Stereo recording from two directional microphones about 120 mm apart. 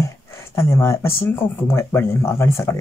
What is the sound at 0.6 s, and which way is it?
Speech, 20° left (ahead or behind).